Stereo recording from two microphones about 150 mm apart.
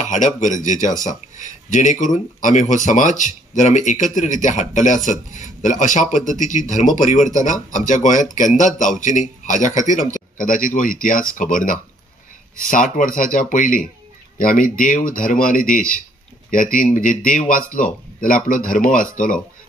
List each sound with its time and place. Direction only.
0.0 s speech: 55° left (ahead or behind)